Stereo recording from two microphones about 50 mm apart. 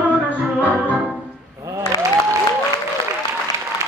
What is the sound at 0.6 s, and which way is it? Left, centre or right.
Music, right.